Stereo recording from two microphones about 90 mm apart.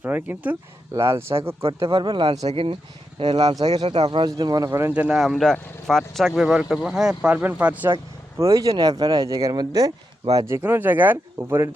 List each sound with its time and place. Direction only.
0.0 s speech: 20° right (ahead or behind)
0.9 s speech: 30° right (ahead or behind)
1.9 s speech: 60° right (ahead or behind)
3.2 s speech: 90° right
3.4 s speech: 50° right (ahead or behind)
3.8 s speech: 80° right
4.3 s speech: 45° right (ahead or behind)
4.9 s speech: 15° right (ahead or behind)
5.1 s speech: centre (ahead or behind); by 7.9 s 15° right (ahead or behind)
8.4 s speech: 35° right (ahead or behind)
10.3 s speech: 30° right (ahead or behind)